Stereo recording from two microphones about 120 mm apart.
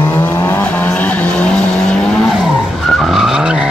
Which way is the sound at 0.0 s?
15° left (ahead or behind).